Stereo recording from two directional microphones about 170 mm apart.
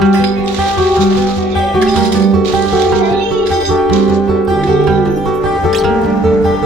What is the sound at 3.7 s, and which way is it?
Music, centre (ahead or behind).